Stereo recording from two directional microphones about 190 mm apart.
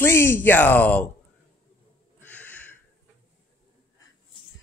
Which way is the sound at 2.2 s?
10° left (ahead or behind).